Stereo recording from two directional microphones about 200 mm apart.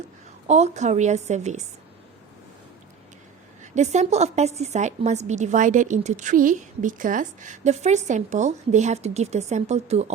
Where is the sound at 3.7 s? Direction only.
35° right (ahead or behind).